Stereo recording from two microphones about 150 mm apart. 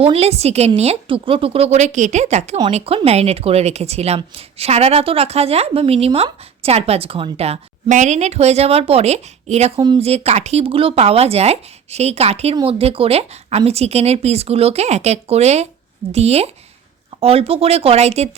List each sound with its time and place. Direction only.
0.0 s speech: 45° right (ahead or behind)